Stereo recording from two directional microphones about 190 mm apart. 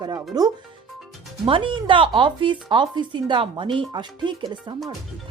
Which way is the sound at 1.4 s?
25° right (ahead or behind).